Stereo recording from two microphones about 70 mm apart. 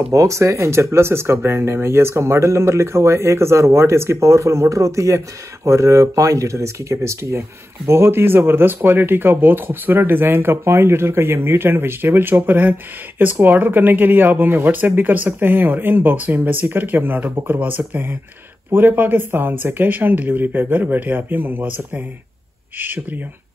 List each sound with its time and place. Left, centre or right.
0.1 s speech: right